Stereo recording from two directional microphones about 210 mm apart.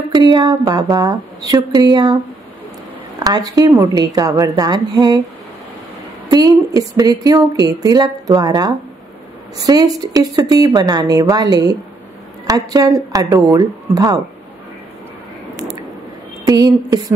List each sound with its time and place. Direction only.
0.1 s speech: 20° right (ahead or behind)
3.3 s speech: 20° right (ahead or behind)
6.2 s speech: 20° right (ahead or behind)
16.4 s speech: 15° right (ahead or behind)